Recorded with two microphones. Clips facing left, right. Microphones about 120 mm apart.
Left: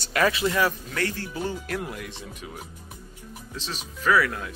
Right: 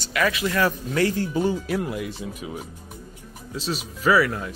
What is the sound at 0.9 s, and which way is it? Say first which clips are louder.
Speech: right 7 dB; 15° right (ahead or behind).